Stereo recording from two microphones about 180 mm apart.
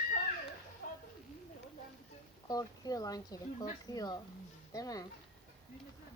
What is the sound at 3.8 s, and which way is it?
Speech, 20° left (ahead or behind).